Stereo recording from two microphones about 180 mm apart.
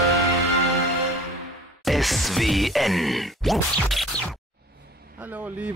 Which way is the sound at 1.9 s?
Centre (ahead or behind).